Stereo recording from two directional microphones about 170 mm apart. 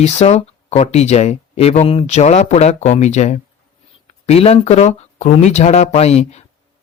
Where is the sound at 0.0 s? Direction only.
40° left (ahead or behind).